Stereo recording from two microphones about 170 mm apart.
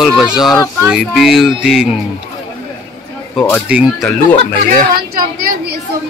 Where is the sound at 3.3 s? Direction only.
10° left (ahead or behind).